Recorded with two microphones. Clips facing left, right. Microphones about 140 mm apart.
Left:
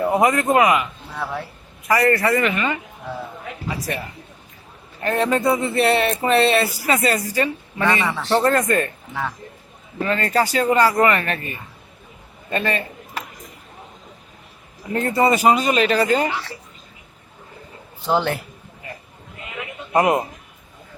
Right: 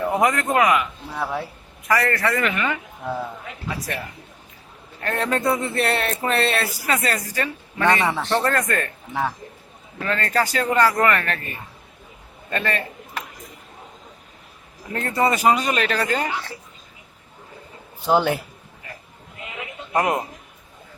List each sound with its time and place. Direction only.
0.2 s speech: 5° left (ahead or behind)
1.1 s speech: 15° right (ahead or behind)
1.9 s speech: 15° left (ahead or behind)
5.0 s speech: 5° left (ahead or behind)
8.0 s speech: 15° right (ahead or behind)
8.3 s speech: 20° left (ahead or behind)
10.0 s speech: 10° left (ahead or behind)
14.9 s speech: 15° left (ahead or behind)
18.0 s speech: 10° right (ahead or behind)
19.9 s speech: 15° left (ahead or behind)